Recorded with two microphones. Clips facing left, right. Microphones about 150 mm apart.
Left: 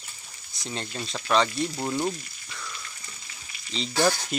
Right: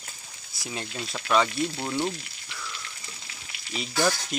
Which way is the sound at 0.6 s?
10° right (ahead or behind).